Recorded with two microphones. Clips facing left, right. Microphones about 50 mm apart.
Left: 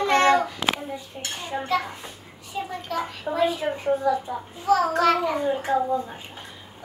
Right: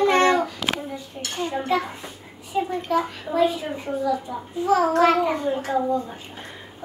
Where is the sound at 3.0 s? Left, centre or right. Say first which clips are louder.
Right 2 dB; centre.